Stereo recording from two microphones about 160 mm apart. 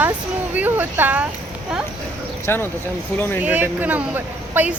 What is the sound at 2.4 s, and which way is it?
Speech, 15° left (ahead or behind).